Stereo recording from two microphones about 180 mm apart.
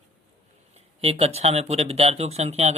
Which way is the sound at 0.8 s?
35° right (ahead or behind).